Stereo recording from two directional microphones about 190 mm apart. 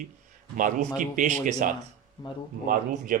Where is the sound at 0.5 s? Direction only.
45° right (ahead or behind).